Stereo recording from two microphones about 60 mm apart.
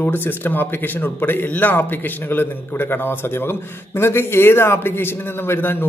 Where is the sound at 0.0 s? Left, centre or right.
Left.